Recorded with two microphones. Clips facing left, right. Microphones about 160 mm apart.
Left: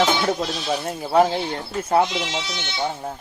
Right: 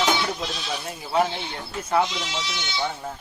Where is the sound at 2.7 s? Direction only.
30° left (ahead or behind).